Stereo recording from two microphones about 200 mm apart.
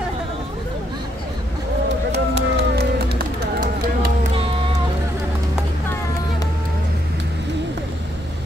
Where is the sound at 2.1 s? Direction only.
55° right (ahead or behind).